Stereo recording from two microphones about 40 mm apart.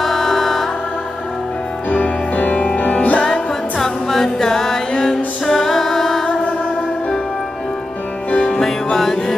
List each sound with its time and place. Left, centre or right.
0.0 s music: centre
1.9 s music: left
3.2 s music: centre
8.3 s music: left
8.9 s music: centre